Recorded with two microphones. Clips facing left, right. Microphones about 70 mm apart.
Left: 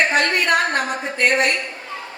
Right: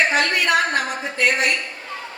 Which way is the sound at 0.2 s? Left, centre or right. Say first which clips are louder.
Left 1 dB; left.